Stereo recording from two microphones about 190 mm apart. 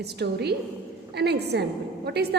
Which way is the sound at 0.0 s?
60° right (ahead or behind).